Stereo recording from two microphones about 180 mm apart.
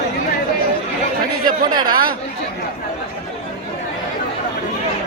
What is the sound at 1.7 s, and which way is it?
Speech, 20° right (ahead or behind).